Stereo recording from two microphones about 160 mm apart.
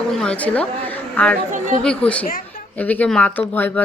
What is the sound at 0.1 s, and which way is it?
A woman's voice, 5° left (ahead or behind).